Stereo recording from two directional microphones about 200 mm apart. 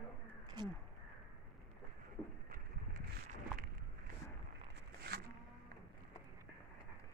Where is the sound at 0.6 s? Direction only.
20° right (ahead or behind).